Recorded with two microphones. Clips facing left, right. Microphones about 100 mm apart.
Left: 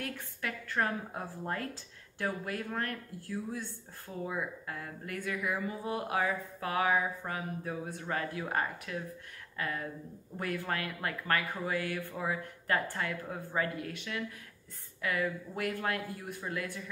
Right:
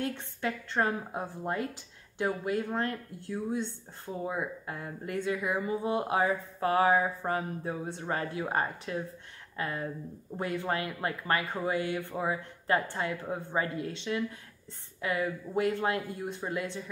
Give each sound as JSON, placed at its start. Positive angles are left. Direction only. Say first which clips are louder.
{"t": 0.0, "sound": "speech", "louder": "right 6 dB", "side_deg": -25}